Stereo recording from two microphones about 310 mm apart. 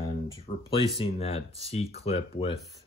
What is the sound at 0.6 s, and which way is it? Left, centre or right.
Speech, centre.